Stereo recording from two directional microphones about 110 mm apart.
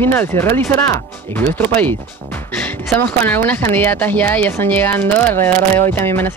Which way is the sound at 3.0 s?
15° left (ahead or behind).